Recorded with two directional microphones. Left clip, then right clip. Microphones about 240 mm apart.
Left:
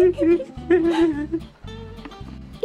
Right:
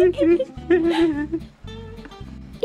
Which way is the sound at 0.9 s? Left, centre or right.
Centre.